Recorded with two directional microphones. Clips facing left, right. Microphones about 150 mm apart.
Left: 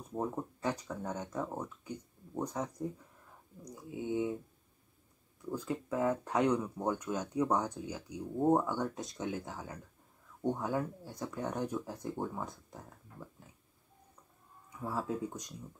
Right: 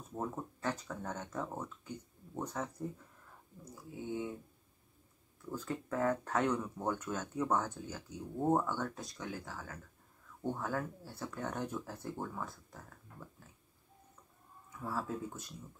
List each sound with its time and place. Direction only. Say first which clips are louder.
0.1 s speech: left 4 dB; 15° left (ahead or behind)
3.6 s a sound: left 4 dB; 20° left (ahead or behind)
5.4 s speech: left 3 dB; 10° left (ahead or behind)
14.8 s speech: left 3 dB; 15° left (ahead or behind)